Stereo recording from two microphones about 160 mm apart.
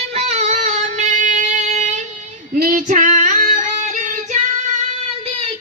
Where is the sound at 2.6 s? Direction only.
55° right (ahead or behind).